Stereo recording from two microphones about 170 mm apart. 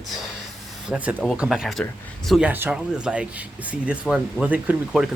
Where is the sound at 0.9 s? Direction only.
10° right (ahead or behind).